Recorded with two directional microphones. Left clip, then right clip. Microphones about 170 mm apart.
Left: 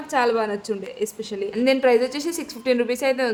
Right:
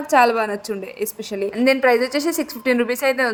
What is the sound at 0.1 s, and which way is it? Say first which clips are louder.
A woman's voice: right 5 dB; 35° right (ahead or behind).